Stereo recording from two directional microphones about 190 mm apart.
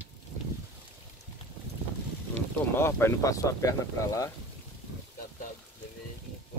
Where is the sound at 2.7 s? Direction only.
15° left (ahead or behind).